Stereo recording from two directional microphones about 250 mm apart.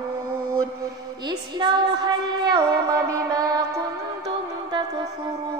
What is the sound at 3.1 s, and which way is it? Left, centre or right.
Music, centre.